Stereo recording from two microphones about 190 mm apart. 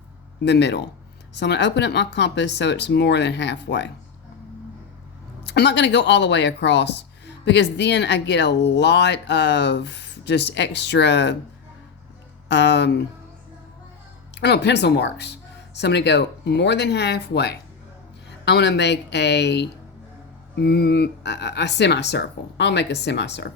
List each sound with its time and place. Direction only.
0.4 s speech: 65° left (ahead or behind)
5.5 s speech: 65° left (ahead or behind)
12.5 s speech: 65° left (ahead or behind)
14.4 s speech: 65° left (ahead or behind)